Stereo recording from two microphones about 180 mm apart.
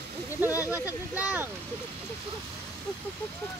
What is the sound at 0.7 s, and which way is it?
Speech, 10° right (ahead or behind).